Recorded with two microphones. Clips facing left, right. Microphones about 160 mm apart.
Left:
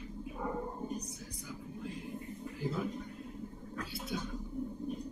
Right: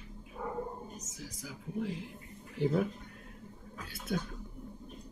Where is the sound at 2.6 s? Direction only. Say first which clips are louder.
Right 7 dB; 75° right (ahead or behind).